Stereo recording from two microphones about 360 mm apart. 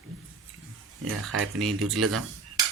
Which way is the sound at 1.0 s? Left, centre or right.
Right.